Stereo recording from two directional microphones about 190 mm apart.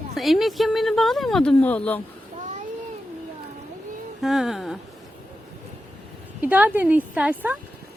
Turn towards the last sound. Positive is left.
turn(degrees=-5)  # may be behind; listen again after turning